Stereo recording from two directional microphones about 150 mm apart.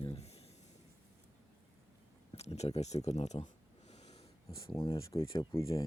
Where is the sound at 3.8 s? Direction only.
45° left (ahead or behind).